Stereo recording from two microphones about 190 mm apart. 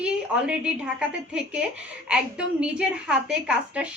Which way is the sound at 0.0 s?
5° right (ahead or behind).